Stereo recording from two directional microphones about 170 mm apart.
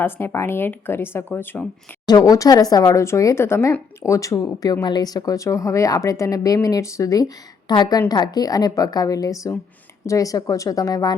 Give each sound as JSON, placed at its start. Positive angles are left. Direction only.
{"t": 0.0, "sound": "speech", "side_deg": 15}
{"t": 2.0, "sound": "speech", "side_deg": 20}